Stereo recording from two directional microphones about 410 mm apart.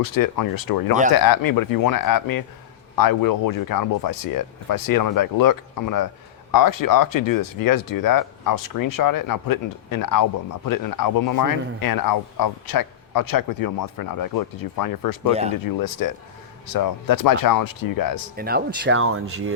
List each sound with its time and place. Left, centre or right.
0.0 s speech: left
15.3 s speech: centre
15.6 s speech: left
18.3 s speech: right